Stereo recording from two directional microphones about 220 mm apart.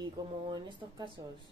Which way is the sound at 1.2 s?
15° right (ahead or behind).